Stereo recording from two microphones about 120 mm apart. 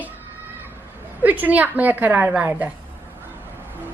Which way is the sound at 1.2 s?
15° right (ahead or behind).